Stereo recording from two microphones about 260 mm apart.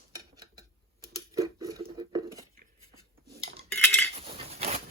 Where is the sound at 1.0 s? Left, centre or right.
Centre.